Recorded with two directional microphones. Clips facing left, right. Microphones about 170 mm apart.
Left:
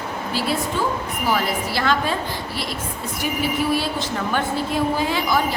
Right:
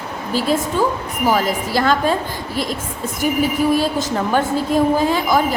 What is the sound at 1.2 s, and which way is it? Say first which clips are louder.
Speech: right 5 dB; 45° right (ahead or behind).